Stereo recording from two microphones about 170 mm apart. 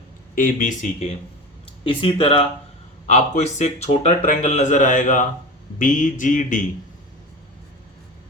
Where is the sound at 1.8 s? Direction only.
30° left (ahead or behind); by 6.7 s 50° left (ahead or behind).